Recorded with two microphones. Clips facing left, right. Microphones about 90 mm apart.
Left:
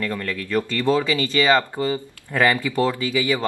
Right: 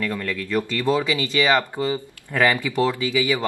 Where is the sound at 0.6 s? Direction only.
15° right (ahead or behind).